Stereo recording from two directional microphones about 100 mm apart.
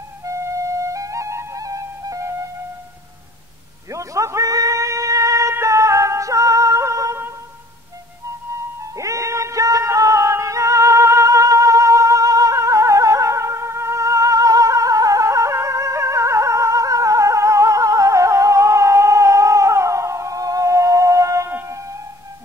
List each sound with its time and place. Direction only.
0.2 s flute: 30° right (ahead or behind)
3.9 s music: 30° right (ahead or behind)
8.9 s music: 30° right (ahead or behind)